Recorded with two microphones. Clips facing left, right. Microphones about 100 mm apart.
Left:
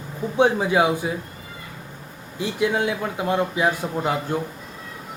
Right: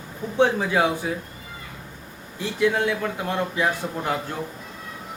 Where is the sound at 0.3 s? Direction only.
15° left (ahead or behind).